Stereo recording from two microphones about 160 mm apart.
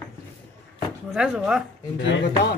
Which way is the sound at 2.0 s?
90° left.